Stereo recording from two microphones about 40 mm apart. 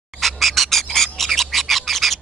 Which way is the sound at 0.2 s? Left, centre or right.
Centre.